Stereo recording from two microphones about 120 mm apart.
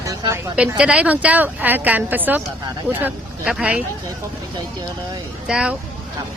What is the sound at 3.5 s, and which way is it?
Speech, 10° right (ahead or behind).